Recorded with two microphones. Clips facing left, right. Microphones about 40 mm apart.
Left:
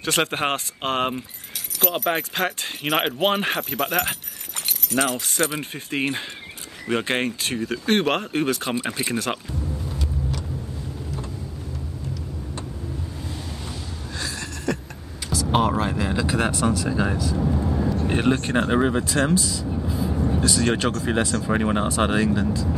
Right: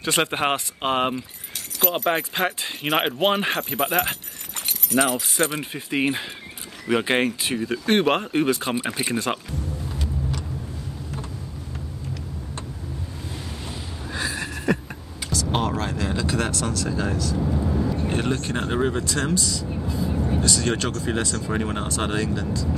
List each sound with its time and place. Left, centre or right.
0.0 s speech: centre
5.6 s speech: centre
13.7 s a sound: centre
15.2 s speech: centre
18.0 s speech: left